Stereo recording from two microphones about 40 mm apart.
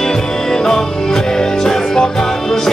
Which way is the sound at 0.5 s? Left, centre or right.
Centre.